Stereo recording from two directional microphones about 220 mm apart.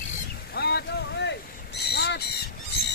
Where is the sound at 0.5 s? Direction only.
50° left (ahead or behind).